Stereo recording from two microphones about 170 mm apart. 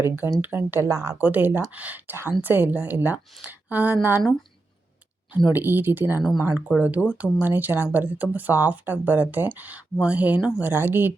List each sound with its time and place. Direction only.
0.0 s speech: 15° right (ahead or behind)
5.5 s speech: 10° right (ahead or behind)